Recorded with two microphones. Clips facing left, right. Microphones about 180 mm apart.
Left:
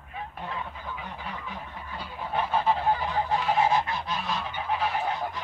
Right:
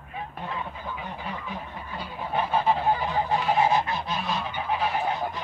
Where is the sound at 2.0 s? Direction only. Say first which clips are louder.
Right 2 dB; 10° right (ahead or behind).